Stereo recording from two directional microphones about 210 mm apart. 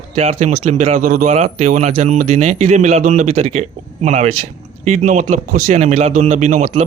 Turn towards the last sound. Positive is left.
turn(degrees=-35)  # may be behind; listen again after turning